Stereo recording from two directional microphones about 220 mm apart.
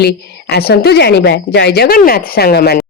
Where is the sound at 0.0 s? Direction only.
50° left (ahead or behind).